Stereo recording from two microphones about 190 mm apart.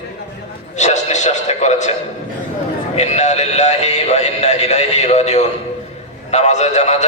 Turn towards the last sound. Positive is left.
turn(degrees=35)  # may be behind; listen again after turning